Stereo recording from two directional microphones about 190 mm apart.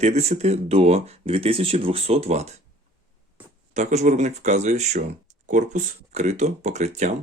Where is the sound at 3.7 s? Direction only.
35° right (ahead or behind).